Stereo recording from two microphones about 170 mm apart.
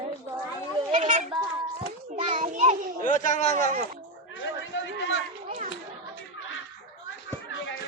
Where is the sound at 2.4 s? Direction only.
45° right (ahead or behind).